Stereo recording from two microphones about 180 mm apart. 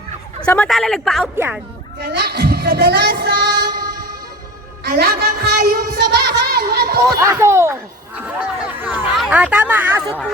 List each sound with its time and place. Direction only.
0.4 s speech: 5° left (ahead or behind)
1.4 s speech: 10° right (ahead or behind)
2.0 s speech: 65° right (ahead or behind)
4.9 s speech: 60° right (ahead or behind)
7.2 s speech: 15° right (ahead or behind)
8.2 s a sound: 10° right (ahead or behind)